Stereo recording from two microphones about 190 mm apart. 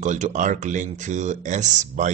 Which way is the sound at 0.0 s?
40° right (ahead or behind).